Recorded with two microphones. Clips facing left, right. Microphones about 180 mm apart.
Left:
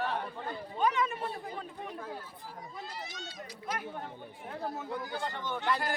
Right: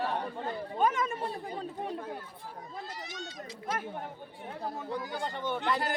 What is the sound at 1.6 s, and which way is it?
Speech, 30° right (ahead or behind).